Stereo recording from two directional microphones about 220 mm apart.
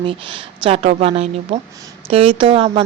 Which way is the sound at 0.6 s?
25° right (ahead or behind).